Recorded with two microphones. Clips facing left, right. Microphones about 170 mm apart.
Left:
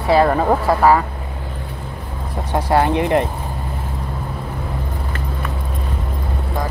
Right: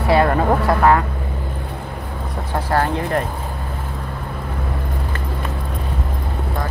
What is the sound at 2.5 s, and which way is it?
Speech, 15° left (ahead or behind).